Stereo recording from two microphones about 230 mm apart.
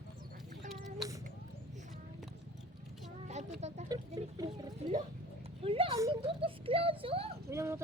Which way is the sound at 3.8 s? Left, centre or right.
Centre.